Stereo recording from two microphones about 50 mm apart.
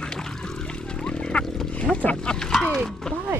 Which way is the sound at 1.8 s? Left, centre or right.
Left.